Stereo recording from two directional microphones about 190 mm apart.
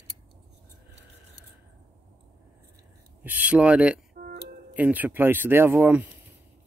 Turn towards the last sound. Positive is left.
turn(degrees=-10)  # may be behind; listen again after turning